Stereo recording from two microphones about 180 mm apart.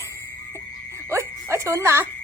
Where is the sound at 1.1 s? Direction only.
15° right (ahead or behind).